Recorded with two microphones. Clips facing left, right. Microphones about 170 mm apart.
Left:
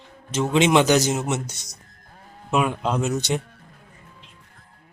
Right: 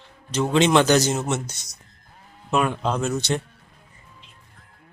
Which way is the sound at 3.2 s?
15° left (ahead or behind).